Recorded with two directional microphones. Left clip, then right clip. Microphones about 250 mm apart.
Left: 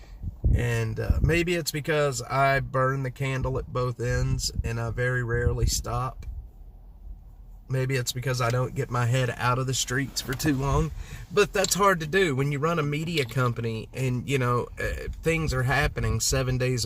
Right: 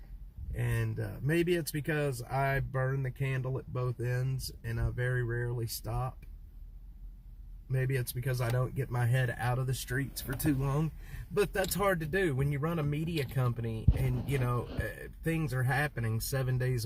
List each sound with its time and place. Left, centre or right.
0.5 s speech: centre
7.7 s speech: centre